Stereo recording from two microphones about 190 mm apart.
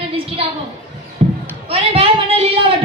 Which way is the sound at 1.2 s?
35° right (ahead or behind).